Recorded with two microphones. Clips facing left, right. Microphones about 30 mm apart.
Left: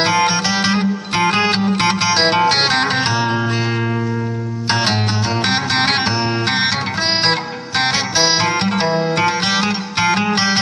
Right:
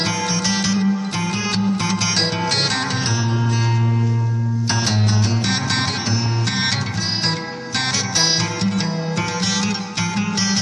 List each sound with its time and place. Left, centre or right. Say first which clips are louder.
0.0 s music: left 6 dB; left
2.4 s music: left 6 dB; left
8.7 s music: left 6 dB; left